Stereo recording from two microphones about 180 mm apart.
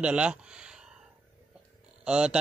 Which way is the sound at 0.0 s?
5° right (ahead or behind).